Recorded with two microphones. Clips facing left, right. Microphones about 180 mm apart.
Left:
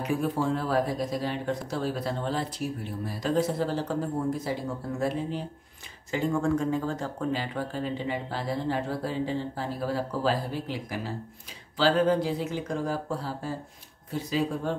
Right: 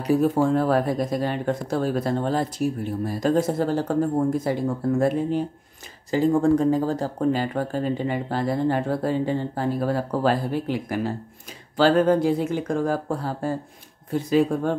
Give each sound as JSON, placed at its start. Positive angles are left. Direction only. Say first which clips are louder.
{"t": 0.0, "sound": "speech", "louder": "right 8 dB", "side_deg": -35}
{"t": 0.4, "sound": "speech", "louder": "right 6 dB", "side_deg": -50}
{"t": 6.1, "sound": "speech", "louder": "right 7 dB", "side_deg": -35}